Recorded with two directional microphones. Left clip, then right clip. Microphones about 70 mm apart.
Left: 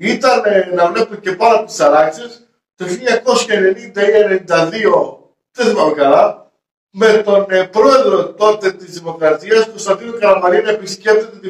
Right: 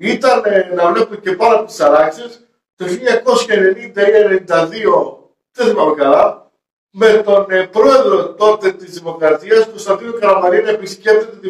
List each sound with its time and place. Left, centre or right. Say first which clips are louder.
0.0 s a man's voice: even; right
1.5 s a man's voice: even; right
10.2 s a man's voice: even; centre